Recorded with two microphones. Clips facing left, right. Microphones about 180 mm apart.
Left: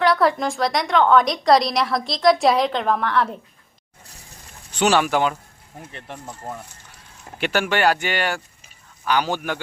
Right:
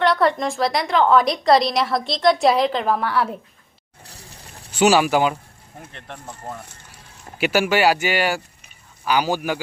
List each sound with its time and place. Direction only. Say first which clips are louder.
0.0 s a woman's voice: even; centre (ahead or behind)
4.7 s speech: right 3 dB; 5° right (ahead or behind)
5.9 s a woman's voice: left 2 dB; 5° left (ahead or behind)
7.3 s speech: right 3 dB; 5° right (ahead or behind)